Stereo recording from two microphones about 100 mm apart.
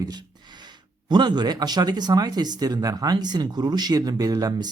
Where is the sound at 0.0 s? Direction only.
45° right (ahead or behind).